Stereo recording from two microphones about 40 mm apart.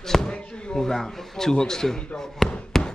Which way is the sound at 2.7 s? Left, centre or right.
Centre.